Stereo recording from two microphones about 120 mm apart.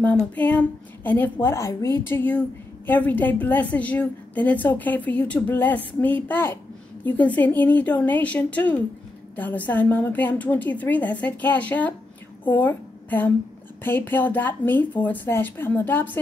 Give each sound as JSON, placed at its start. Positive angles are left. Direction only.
{"t": 0.4, "sound": "a woman's voice", "side_deg": 15}